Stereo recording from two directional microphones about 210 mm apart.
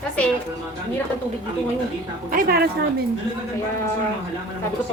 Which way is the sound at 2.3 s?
45° right (ahead or behind).